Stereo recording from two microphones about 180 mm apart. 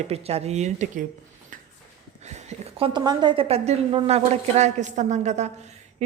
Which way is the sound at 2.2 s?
35° right (ahead or behind).